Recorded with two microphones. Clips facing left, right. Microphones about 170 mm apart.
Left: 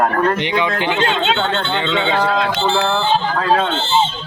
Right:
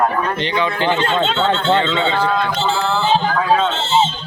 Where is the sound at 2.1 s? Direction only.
90° left; by 3.5 s 70° left (ahead or behind).